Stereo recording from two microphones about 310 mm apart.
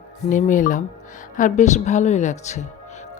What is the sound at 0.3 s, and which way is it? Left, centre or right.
A woman's voice, left.